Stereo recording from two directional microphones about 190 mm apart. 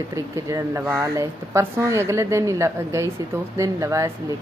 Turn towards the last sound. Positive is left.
turn(degrees=-15)  # may be behind; listen again after turning